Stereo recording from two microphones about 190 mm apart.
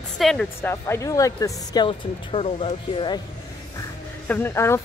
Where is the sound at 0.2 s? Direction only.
Centre (ahead or behind).